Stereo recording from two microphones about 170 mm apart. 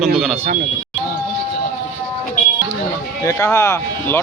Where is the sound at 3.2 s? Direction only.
20° left (ahead or behind).